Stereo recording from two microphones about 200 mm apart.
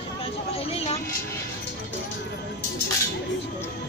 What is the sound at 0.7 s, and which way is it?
Vehicle, 30° left (ahead or behind).